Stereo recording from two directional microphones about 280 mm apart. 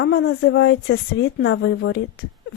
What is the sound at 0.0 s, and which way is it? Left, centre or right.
Speech, left.